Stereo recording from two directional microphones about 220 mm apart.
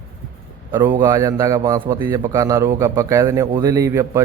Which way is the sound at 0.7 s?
10° right (ahead or behind).